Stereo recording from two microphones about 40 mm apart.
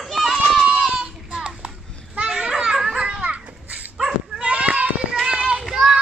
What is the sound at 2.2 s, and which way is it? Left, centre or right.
Children playing, centre.